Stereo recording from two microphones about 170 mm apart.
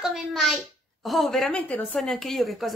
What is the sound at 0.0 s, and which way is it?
Speech, centre (ahead or behind).